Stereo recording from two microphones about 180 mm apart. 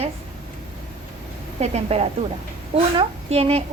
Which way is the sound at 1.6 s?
35° right (ahead or behind).